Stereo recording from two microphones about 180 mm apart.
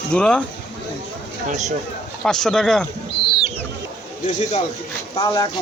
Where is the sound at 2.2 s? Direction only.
5° left (ahead or behind).